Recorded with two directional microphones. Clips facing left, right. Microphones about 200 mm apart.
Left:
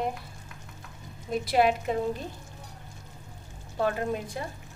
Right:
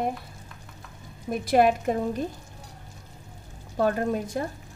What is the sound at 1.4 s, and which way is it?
Speech, 45° right (ahead or behind).